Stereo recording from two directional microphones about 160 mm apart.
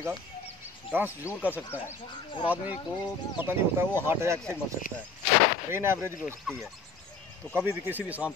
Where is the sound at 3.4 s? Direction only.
15° right (ahead or behind).